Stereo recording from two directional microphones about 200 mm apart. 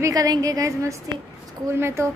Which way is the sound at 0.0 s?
20° right (ahead or behind).